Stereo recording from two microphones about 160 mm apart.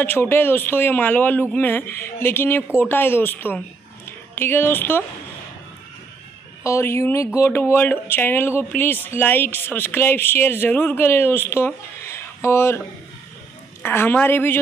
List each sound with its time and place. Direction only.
0.0 s speech: 15° left (ahead or behind)
6.6 s speech: 15° left (ahead or behind)
13.8 s speech: 15° left (ahead or behind)